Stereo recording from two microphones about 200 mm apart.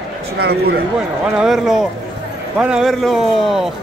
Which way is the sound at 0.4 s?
55° right (ahead or behind).